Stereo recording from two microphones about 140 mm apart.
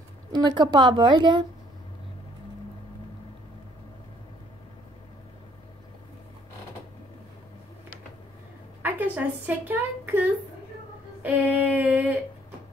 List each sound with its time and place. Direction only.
0.3 s speech: 30° right (ahead or behind)
8.8 s speech: 15° right (ahead or behind)
11.2 s a sound: 10° right (ahead or behind)